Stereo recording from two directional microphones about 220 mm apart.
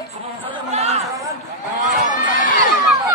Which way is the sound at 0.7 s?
30° right (ahead or behind).